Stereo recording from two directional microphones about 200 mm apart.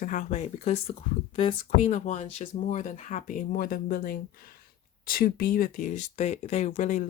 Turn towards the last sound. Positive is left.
turn(degrees=40)  # may be behind; listen again after turning